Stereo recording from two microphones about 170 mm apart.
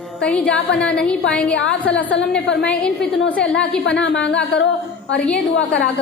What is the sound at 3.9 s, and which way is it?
Speech, 90° left.